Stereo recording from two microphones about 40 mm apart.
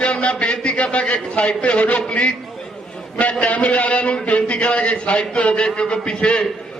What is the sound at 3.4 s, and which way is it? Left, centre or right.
A man's voice, left.